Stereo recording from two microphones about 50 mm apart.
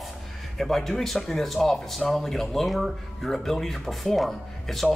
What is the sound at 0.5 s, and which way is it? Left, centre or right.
Speech, centre.